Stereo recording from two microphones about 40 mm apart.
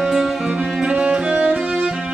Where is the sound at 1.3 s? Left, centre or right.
Right.